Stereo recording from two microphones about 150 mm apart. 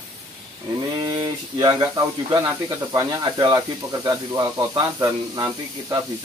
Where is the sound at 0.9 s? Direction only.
30° right (ahead or behind).